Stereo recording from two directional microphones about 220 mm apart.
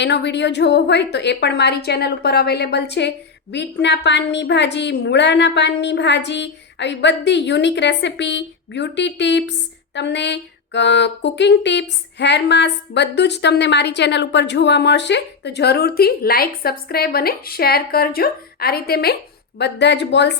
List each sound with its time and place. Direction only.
0.0 s a woman's voice: 50° left (ahead or behind)